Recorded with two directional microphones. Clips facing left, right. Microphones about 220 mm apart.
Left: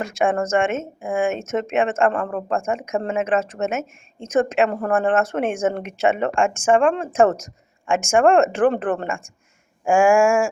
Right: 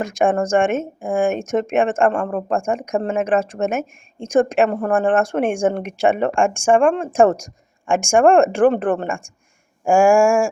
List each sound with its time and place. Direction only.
0.0 s speech: 15° right (ahead or behind)